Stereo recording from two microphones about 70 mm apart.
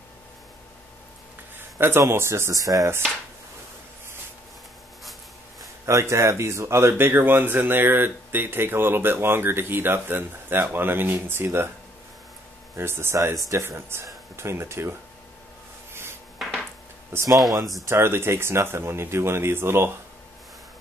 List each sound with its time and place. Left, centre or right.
1.8 s speech: right
5.9 s speech: right
12.7 s speech: right
16.4 s dishes: centre
17.1 s speech: right